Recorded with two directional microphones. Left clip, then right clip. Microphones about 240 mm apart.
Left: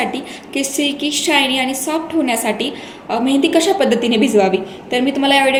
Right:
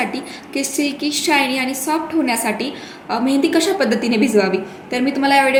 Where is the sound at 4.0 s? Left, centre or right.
Right.